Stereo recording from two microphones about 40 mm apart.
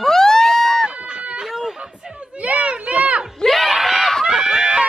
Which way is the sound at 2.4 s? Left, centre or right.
Right.